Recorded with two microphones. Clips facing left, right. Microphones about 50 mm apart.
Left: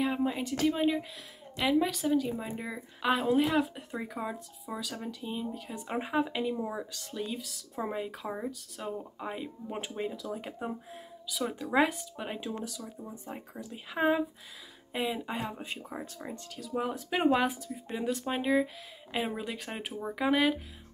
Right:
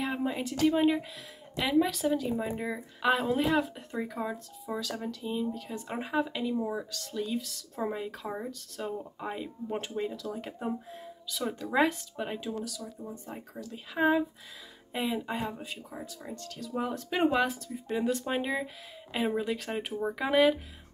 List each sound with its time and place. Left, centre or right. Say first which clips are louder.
0.0 s speech: left 1 dB; centre
12.5 s speech: right 1 dB; left
14.9 s speech: right 1 dB; centre
15.6 s speech: left 1 dB; left
16.5 s speech: even; centre